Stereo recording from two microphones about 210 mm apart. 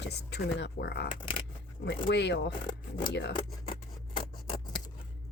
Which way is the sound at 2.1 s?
55° left (ahead or behind).